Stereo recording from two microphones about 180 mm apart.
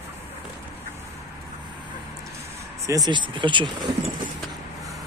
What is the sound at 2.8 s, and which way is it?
Speech, 20° right (ahead or behind).